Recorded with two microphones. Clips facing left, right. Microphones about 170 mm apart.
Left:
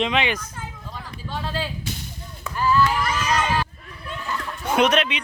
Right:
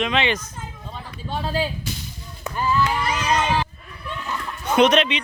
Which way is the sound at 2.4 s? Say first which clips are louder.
Left 2 dB; 20° right (ahead or behind).